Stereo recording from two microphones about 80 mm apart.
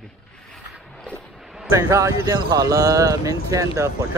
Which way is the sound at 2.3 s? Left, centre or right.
Right.